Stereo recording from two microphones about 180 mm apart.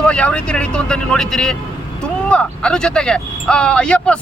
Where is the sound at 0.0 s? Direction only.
5° left (ahead or behind).